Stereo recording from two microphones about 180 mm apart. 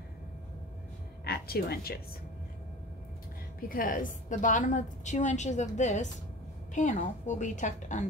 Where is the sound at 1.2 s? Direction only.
60° left (ahead or behind).